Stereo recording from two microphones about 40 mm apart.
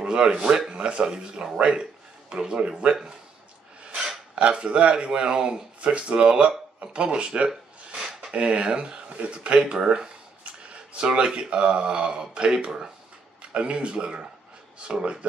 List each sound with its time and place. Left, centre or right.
0.0 s speech: right
3.9 s a sound: centre
4.4 s speech: right